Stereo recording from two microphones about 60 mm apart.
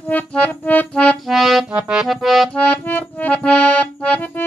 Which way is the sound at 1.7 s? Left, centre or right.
Centre.